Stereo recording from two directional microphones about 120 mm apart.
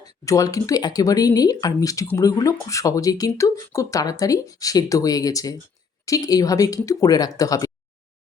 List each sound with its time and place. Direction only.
0.0 s speech: 30° left (ahead or behind)